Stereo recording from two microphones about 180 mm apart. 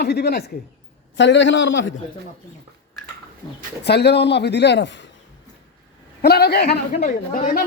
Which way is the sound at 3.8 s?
65° left (ahead or behind).